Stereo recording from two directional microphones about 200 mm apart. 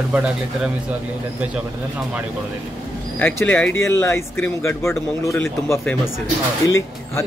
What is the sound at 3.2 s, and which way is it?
Speech, 10° left (ahead or behind).